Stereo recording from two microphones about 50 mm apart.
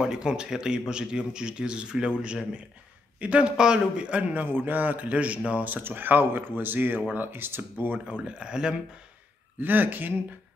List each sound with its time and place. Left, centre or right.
0.0 s a man's voice: centre; by 7.6 s right
8.1 s speech: right
9.6 s speech: right